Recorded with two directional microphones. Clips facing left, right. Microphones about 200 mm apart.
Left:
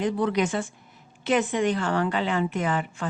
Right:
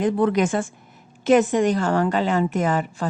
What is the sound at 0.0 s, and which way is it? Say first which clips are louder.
A woman's voice: right 5 dB; 50° right (ahead or behind).